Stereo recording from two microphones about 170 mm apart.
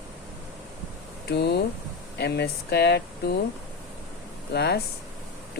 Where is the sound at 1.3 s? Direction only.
70° left (ahead or behind).